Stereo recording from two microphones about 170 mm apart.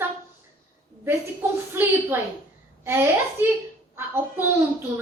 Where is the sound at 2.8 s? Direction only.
15° right (ahead or behind).